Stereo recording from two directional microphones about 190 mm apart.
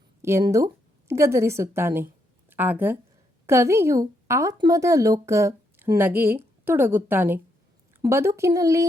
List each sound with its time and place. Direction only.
0.2 s a woman's voice: 15° right (ahead or behind)